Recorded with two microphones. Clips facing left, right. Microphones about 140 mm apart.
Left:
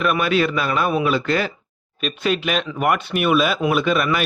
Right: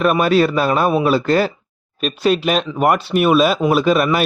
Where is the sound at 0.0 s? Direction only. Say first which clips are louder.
Right 5 dB; 40° right (ahead or behind).